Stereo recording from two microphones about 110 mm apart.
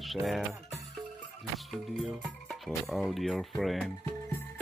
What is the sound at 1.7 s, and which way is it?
Speech, centre (ahead or behind).